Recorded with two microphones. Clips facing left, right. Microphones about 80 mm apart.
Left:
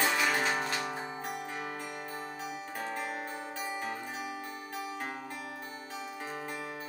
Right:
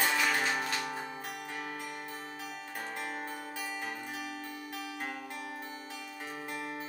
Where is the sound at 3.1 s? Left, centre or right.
Centre.